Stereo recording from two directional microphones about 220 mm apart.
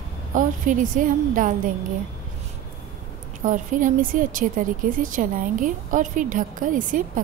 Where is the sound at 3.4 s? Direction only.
35° right (ahead or behind).